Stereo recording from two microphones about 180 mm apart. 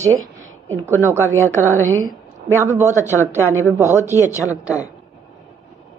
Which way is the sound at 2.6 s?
15° right (ahead or behind).